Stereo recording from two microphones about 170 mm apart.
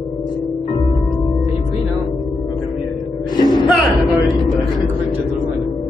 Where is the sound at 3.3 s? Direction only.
25° left (ahead or behind).